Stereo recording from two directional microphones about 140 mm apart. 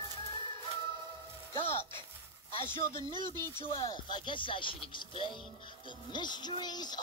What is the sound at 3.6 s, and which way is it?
Speech, 35° left (ahead or behind).